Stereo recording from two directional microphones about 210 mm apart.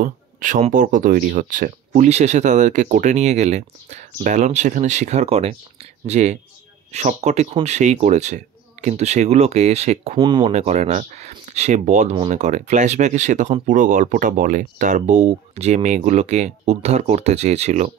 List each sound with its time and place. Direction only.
0.0 s speech: 40° right (ahead or behind)